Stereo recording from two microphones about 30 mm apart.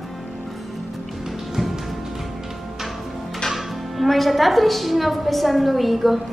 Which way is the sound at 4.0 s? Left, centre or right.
Centre.